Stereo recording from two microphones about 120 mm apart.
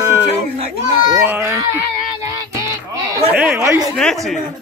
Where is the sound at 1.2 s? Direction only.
20° right (ahead or behind).